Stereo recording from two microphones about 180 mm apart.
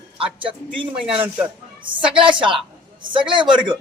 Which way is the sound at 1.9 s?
30° right (ahead or behind).